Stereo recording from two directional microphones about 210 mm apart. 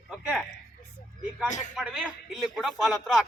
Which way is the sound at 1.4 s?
35° left (ahead or behind).